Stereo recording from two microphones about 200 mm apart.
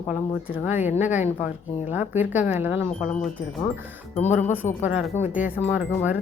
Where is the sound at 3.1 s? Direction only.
5° left (ahead or behind).